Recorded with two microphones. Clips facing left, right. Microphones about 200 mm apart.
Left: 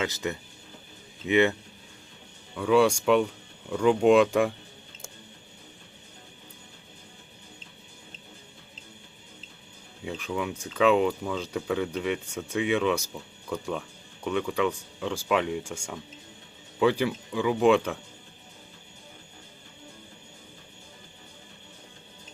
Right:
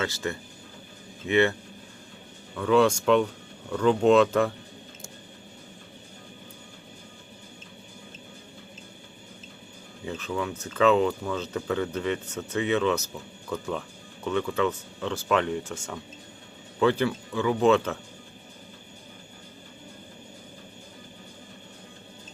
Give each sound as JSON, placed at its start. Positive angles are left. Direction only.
{"t": 0.0, "sound": "speech", "side_deg": 15}
{"t": 2.6, "sound": "speech", "side_deg": 10}
{"t": 10.0, "sound": "speech", "side_deg": 10}